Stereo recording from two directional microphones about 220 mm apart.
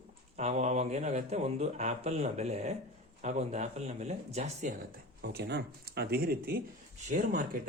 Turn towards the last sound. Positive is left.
turn(degrees=-40)  # may be behind; listen again after turning